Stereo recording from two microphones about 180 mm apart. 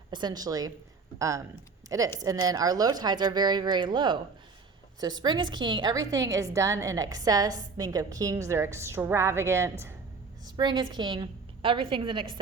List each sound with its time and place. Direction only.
0.1 s a woman's voice: 25° right (ahead or behind)